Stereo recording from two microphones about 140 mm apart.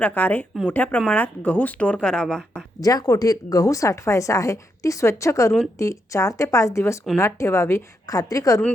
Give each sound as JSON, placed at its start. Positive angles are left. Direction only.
{"t": 0.0, "sound": "speech", "side_deg": 10}
{"t": 2.8, "sound": "a woman's voice", "side_deg": 25}